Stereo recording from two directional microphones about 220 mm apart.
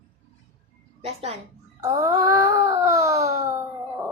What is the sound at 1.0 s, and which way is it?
Speech, 30° right (ahead or behind).